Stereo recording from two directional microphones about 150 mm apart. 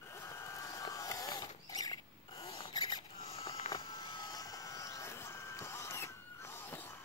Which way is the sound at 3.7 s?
30° left (ahead or behind).